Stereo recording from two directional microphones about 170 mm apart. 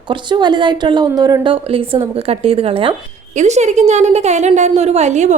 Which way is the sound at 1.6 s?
30° right (ahead or behind).